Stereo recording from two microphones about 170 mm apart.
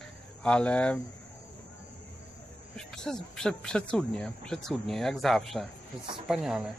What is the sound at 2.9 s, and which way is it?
Speech, 5° left (ahead or behind).